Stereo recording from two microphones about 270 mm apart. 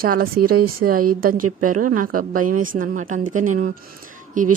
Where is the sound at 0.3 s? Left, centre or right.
Right.